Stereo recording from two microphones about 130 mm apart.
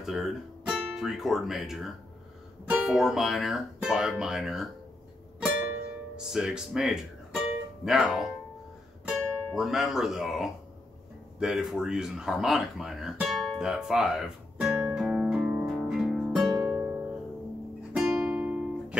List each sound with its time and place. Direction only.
0.0 s speech: centre (ahead or behind)
6.1 s speech: 5° right (ahead or behind)
11.3 s a sound: 5° right (ahead or behind)
16.5 s music: 15° right (ahead or behind)